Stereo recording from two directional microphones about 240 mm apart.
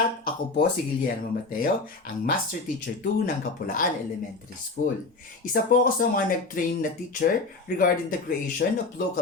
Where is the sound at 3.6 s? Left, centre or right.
Left.